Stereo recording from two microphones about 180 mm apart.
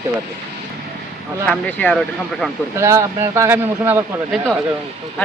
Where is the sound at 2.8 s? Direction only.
15° right (ahead or behind).